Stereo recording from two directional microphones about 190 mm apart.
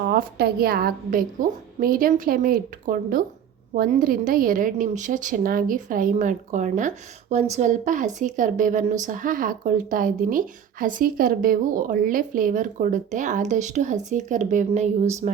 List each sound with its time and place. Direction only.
0.0 s a woman's voice: 55° right (ahead or behind); by 15.3 s 35° right (ahead or behind)